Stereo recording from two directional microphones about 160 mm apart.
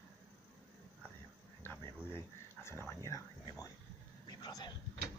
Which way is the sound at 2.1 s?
15° left (ahead or behind).